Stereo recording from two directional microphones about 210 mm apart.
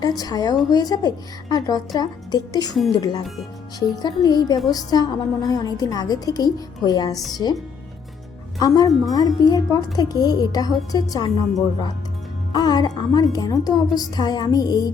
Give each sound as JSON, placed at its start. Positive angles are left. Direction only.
{"t": 0.2, "sound": "a woman's voice", "side_deg": 20}